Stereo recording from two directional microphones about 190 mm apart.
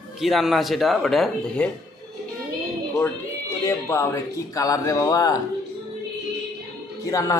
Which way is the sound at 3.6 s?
15° left (ahead or behind).